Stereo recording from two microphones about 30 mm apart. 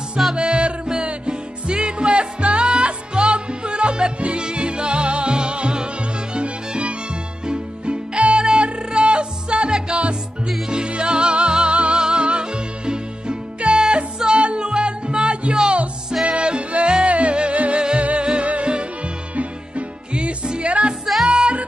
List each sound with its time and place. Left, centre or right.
0.4 s music: right
18.2 s music: right
20.2 s music: right
20.6 s music: right
21.0 s music: centre
21.3 s music: right